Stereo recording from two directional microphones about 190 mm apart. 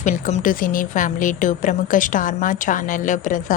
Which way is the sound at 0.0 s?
40° left (ahead or behind).